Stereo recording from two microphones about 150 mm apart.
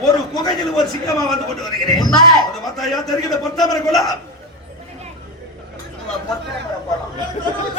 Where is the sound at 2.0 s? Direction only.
25° left (ahead or behind).